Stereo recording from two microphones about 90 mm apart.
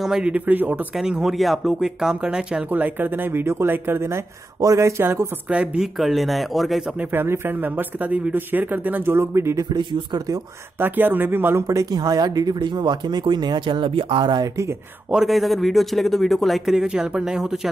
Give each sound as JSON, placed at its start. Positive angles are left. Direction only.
{"t": 0.0, "sound": "speech", "side_deg": -10}
{"t": 0.9, "sound": "speech", "side_deg": -5}
{"t": 2.7, "sound": "speech", "side_deg": -20}
{"t": 5.5, "sound": "speech", "side_deg": -15}
{"t": 5.9, "sound": "speech", "side_deg": 0}
{"t": 7.0, "sound": "speech", "side_deg": -25}
{"t": 9.7, "sound": "speech", "side_deg": -60}
{"t": 10.8, "sound": "speech", "side_deg": -20}
{"t": 11.6, "sound": "speech", "side_deg": -40}
{"t": 15.0, "sound": "speech", "side_deg": -5}